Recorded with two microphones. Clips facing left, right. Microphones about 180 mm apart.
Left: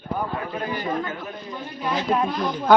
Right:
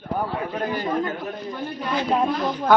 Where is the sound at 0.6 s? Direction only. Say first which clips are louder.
Right 4 dB; 45° right (ahead or behind).